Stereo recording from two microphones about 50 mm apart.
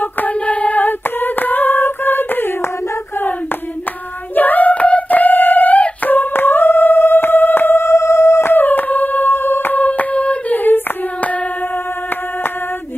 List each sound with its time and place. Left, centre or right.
0.0 s singing: left
4.4 s a sound: left
7.8 s singing bowl: left
8.5 s music: left